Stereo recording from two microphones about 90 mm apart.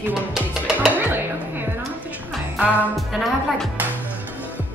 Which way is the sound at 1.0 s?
25° right (ahead or behind).